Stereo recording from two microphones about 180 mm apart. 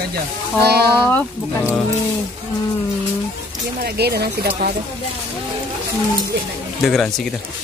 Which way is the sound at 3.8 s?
60° right (ahead or behind).